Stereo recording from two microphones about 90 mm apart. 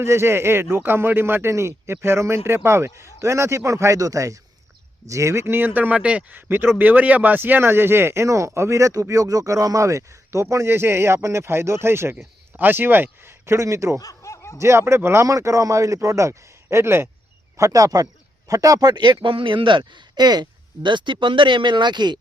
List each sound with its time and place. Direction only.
0.0 s speech: 30° right (ahead or behind)
14.0 s snicker: 40° left (ahead or behind)
14.6 s speech: 30° right (ahead or behind)
17.6 s a man's voice: 40° right (ahead or behind); by 22.2 s 55° right (ahead or behind)